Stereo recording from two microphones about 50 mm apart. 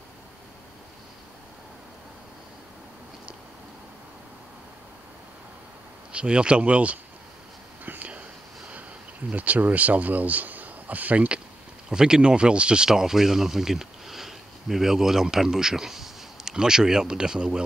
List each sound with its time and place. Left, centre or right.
6.1 s speech: right
7.8 s whispering: right
8.1 s whispering: right
9.3 s speech: right
11.9 s speech: centre